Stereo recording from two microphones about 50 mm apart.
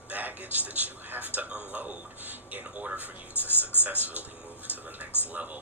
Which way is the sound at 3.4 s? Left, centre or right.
Left.